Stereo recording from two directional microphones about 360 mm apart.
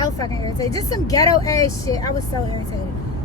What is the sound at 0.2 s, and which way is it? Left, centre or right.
Speech, centre.